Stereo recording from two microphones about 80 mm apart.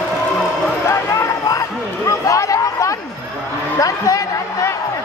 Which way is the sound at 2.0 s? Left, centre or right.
Left.